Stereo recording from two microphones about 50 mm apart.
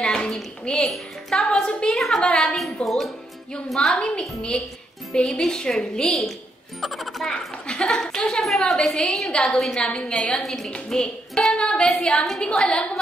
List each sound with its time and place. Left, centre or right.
0.0 s a woman's voice: centre
2.5 s a woman's voice: centre
3.9 s a woman's voice: left
6.8 s a woman's voice: centre
7.2 s a woman's voice: centre